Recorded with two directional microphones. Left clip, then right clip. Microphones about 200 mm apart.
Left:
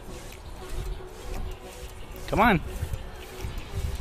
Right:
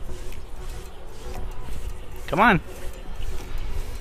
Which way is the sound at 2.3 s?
10° left (ahead or behind).